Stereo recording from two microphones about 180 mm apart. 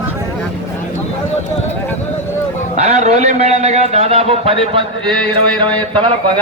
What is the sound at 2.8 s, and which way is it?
A man's voice, 40° right (ahead or behind).